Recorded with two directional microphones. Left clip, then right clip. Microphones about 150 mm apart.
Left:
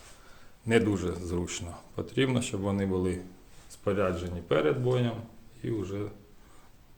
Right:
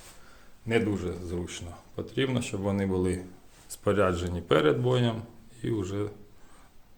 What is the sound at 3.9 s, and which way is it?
Speech, 35° right (ahead or behind).